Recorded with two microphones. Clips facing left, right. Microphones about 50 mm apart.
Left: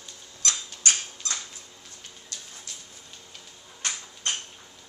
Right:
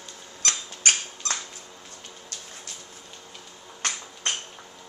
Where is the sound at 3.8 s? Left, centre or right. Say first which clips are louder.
Right 3 dB; right.